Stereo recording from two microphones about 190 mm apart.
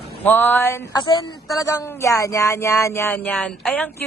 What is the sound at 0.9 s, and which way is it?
A man's voice, 20° left (ahead or behind).